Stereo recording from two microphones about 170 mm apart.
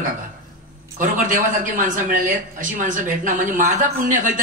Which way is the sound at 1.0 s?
50° right (ahead or behind).